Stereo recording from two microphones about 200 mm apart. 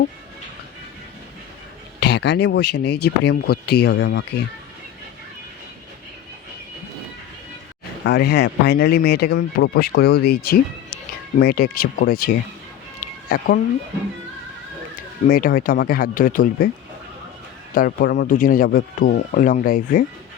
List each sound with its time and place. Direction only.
2.0 s speech: 60° left (ahead or behind)
8.0 s speech: 55° left (ahead or behind)
15.3 s speech: 45° left (ahead or behind)
17.7 s speech: 50° left (ahead or behind)